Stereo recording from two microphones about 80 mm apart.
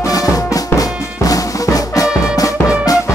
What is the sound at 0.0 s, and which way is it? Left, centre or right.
Music, left.